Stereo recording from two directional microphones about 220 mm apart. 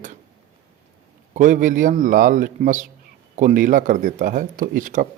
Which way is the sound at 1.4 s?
35° right (ahead or behind).